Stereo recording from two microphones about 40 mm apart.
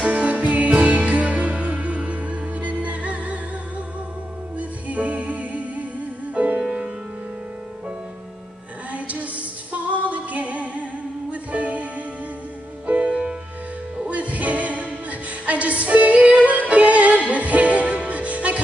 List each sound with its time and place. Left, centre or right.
0.0 s music: right
4.6 s music: right
6.6 s music: centre
8.9 s music: right